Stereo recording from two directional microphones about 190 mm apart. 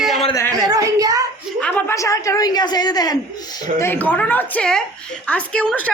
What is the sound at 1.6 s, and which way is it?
A woman's voice, 10° left (ahead or behind).